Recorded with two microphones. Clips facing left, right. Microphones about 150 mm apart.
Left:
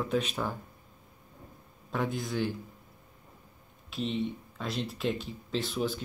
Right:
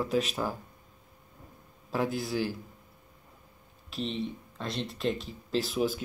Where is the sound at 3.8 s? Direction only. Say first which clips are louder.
Left 2 dB; centre (ahead or behind).